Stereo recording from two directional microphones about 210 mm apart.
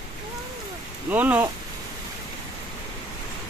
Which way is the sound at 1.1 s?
10° right (ahead or behind).